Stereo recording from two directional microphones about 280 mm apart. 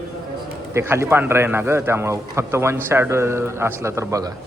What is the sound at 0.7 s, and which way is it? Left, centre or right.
A man's voice, centre.